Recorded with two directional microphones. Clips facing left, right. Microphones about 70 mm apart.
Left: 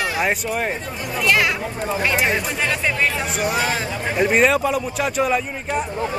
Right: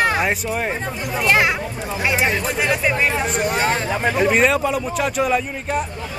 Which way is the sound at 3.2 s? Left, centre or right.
Centre.